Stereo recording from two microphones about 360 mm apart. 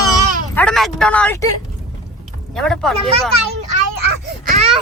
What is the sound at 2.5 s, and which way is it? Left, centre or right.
Speech, centre.